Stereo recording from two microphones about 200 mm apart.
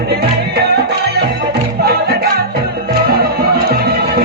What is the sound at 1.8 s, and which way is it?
Music, 50° right (ahead or behind).